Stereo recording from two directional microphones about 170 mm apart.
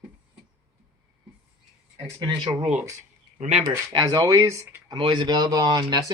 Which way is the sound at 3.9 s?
25° right (ahead or behind).